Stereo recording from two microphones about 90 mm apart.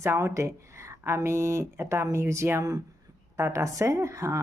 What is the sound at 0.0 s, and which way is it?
Speech, 30° right (ahead or behind).